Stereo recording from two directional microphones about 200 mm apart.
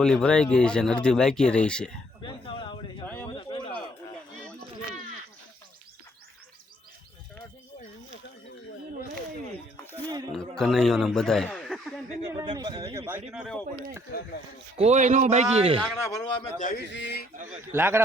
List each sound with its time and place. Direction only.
0.0 s speech: 5° left (ahead or behind)
2.2 s a sound: 25° left (ahead or behind)
3.8 s a sound: 5° left (ahead or behind)
10.3 s a sound: 5° left (ahead or behind)
12.4 s speech: 20° right (ahead or behind)
13.3 s speech: centre (ahead or behind)
14.8 s a man's voice: 35° right (ahead or behind)
15.8 s a man's voice: 15° left (ahead or behind)
16.6 s a man's voice: 45° left (ahead or behind)
16.9 s speech: 60° left (ahead or behind)
17.7 s speech: 10° right (ahead or behind)